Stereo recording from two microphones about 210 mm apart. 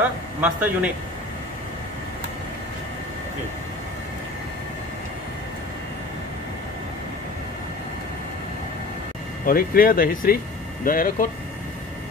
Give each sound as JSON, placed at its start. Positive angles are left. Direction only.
{"t": 0.4, "sound": "a man's voice", "side_deg": -5}
{"t": 9.5, "sound": "speech", "side_deg": 45}